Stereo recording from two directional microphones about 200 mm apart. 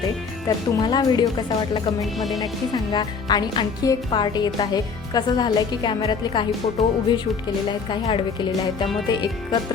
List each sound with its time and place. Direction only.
0.4 s speech: 20° left (ahead or behind)
2.0 s music: centre (ahead or behind)
2.4 s speech: 20° left (ahead or behind)